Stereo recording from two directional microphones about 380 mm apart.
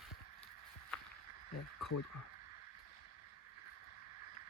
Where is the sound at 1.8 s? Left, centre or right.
Left.